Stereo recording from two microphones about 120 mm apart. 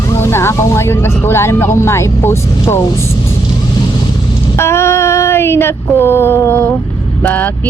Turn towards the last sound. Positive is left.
turn(degrees=15)  # may be behind; listen again after turning